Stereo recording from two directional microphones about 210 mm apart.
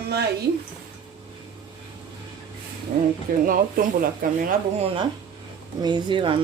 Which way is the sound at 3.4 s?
40° right (ahead or behind).